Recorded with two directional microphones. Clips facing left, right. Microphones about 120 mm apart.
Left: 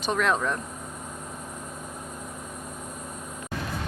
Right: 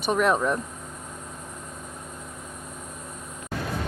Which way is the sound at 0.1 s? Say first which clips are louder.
Right 3 dB; 15° right (ahead or behind).